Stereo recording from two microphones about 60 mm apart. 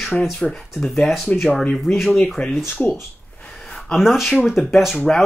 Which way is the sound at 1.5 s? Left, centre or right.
Left.